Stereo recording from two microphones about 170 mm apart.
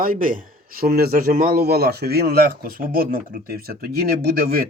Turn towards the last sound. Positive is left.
turn(degrees=-65)  # may be behind; listen again after turning